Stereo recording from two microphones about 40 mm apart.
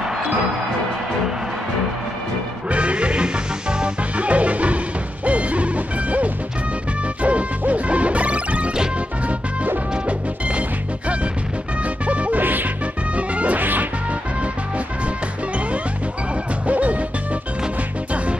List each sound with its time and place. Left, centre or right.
0.0 s music: centre
2.7 s music: right
4.2 s music: right
5.2 s hoot: right
7.2 s smash: right
11.8 s music: right
12.4 s music: right
13.1 s music: right
13.6 s music: right
16.6 s music: right